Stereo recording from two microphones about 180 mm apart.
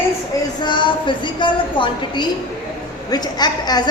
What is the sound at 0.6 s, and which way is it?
A woman's voice, 25° left (ahead or behind).